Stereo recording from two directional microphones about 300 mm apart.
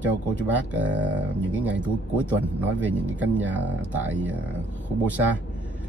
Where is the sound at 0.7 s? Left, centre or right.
Centre.